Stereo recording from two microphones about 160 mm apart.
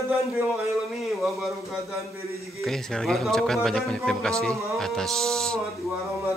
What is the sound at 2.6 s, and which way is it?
Speech, centre (ahead or behind).